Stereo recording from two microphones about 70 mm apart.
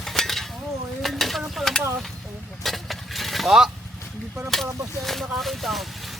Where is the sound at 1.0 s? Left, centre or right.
Centre.